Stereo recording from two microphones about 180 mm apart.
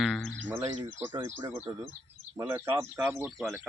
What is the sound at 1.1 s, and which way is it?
Speech, 20° right (ahead or behind).